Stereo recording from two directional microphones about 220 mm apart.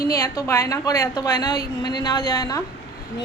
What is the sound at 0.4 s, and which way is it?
A woman's voice, 15° left (ahead or behind).